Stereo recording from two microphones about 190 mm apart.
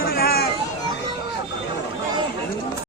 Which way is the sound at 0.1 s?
55° left (ahead or behind).